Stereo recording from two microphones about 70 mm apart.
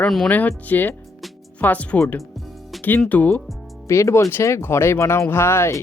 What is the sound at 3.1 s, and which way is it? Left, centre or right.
Speech, left.